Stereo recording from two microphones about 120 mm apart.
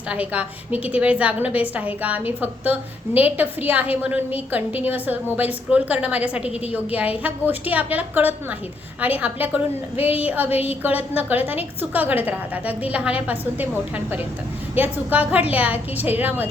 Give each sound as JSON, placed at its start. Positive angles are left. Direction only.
{"t": 0.1, "sound": "a woman's voice", "side_deg": -10}
{"t": 10.5, "sound": "a woman's voice", "side_deg": 55}
{"t": 10.8, "sound": "a woman's voice", "side_deg": -15}